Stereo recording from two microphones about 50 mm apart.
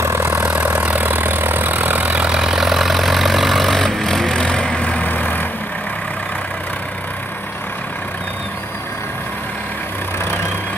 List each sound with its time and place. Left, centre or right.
0.0 s vehicle: right
0.5 s vehicle: right
2.3 s vehicle: centre; by 5.5 s left